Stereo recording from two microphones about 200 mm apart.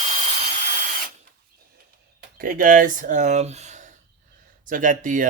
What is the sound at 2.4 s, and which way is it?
Speech, 45° right (ahead or behind).